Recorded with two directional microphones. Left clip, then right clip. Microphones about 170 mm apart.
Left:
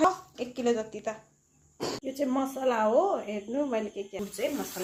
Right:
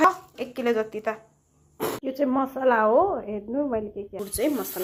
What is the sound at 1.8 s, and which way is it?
A woman's voice, 20° right (ahead or behind).